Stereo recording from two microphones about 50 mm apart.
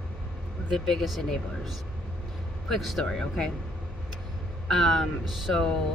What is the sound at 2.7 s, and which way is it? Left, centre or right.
Speech, centre.